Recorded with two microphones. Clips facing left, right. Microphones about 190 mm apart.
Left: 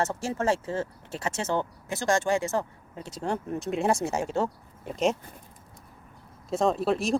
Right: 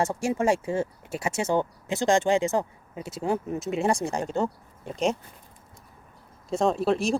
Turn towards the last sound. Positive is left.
turn(degrees=0)  # may be behind; listen again after turning